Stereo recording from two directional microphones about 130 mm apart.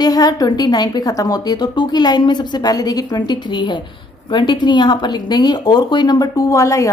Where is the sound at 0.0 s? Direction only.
30° left (ahead or behind).